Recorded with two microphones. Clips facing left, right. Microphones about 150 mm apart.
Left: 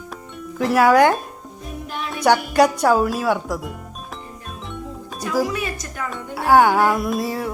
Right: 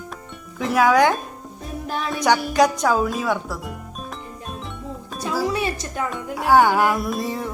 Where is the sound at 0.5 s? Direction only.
Centre (ahead or behind).